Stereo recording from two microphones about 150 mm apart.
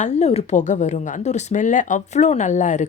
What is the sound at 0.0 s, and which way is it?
Speech, 50° left (ahead or behind).